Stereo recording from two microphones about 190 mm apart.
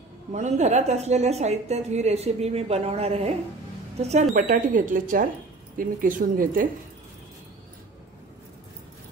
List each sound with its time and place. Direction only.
0.3 s a woman's voice: 35° right (ahead or behind)